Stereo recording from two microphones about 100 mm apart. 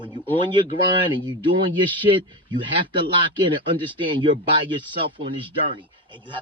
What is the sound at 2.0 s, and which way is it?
A man's voice, 55° right (ahead or behind).